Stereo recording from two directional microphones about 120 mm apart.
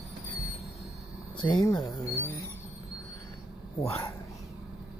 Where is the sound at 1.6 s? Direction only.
30° left (ahead or behind).